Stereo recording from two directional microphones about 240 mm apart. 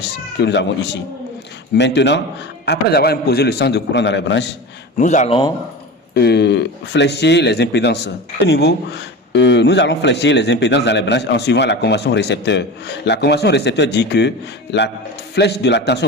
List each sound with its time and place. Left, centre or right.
0.0 s speech: left
4.9 s speech: left
6.1 s speech: left